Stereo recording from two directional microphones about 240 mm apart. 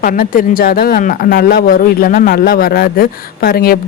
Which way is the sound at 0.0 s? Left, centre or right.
Left.